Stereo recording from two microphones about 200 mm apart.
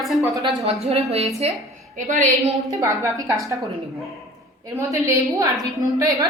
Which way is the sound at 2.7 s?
15° right (ahead or behind).